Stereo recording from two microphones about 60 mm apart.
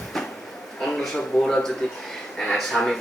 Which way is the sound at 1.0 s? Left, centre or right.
Centre.